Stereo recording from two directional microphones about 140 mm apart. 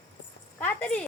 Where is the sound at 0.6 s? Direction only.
10° left (ahead or behind).